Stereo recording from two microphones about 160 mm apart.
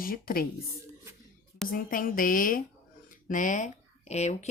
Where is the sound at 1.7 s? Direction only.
60° left (ahead or behind); by 4.5 s 45° left (ahead or behind).